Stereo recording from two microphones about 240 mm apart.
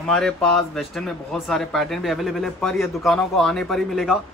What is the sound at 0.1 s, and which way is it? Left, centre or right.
Speech, centre.